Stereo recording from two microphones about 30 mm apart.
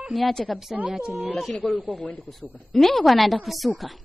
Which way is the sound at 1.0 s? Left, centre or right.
Right.